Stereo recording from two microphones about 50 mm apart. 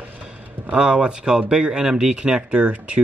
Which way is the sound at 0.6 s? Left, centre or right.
Centre.